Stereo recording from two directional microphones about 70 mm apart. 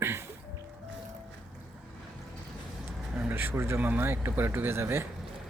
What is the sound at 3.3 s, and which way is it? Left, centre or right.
Speech, right.